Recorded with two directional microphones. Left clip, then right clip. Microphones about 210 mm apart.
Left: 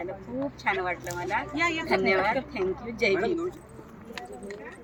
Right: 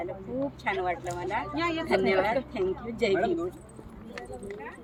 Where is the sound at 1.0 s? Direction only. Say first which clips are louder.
Left 1 dB; 35° left (ahead or behind).